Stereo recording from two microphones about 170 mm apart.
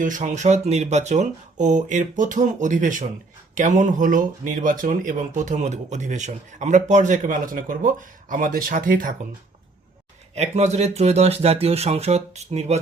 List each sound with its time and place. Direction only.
0.0 s speech: 50° right (ahead or behind)
10.3 s speech: 40° right (ahead or behind)